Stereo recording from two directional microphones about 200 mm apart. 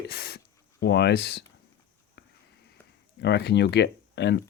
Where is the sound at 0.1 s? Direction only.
50° left (ahead or behind).